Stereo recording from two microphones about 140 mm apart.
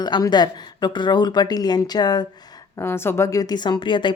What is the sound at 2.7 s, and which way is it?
A woman's voice, 15° left (ahead or behind).